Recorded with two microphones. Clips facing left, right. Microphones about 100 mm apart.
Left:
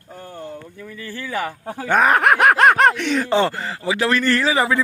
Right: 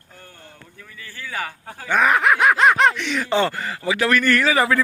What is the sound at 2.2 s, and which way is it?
Speech, 55° left (ahead or behind).